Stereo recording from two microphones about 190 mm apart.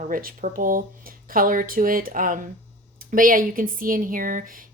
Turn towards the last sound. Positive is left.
turn(degrees=-45)  # may be behind; listen again after turning